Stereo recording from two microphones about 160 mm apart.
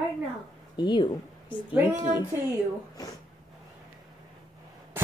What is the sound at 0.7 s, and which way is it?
A woman's voice, 30° left (ahead or behind).